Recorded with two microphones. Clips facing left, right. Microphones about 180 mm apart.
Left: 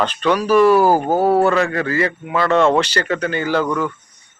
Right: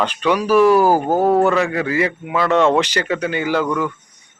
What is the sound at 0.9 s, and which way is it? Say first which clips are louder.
Speech: even; 10° left (ahead or behind).